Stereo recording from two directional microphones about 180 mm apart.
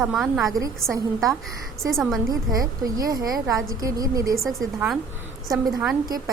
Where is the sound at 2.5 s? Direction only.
20° right (ahead or behind).